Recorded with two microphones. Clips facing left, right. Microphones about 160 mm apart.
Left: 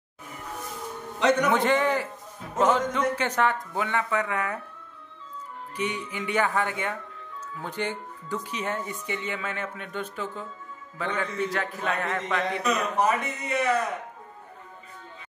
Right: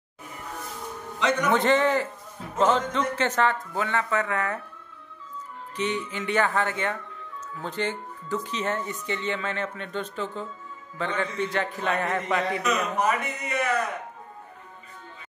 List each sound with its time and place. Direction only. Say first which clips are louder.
1.5 s speech: right 2 dB; 10° left (ahead or behind)
5.8 s a man's voice: right 2 dB; 10° left (ahead or behind)
13.0 s speech: left 1 dB; 25° left (ahead or behind)